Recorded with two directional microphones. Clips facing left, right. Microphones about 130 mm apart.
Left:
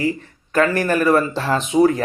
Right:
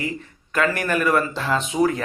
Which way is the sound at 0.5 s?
35° left (ahead or behind).